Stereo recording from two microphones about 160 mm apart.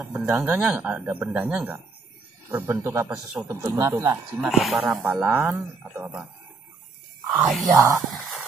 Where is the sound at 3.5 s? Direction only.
20° right (ahead or behind).